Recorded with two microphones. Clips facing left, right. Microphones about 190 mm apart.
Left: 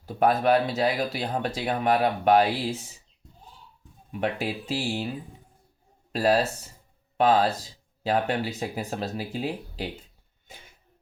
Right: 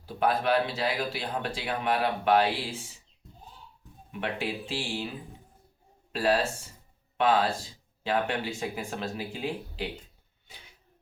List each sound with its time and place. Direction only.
0.0 s speech: 45° left (ahead or behind)
4.1 s speech: 40° left (ahead or behind)
6.1 s speech: 40° left (ahead or behind)
10.5 s a sound: 50° left (ahead or behind)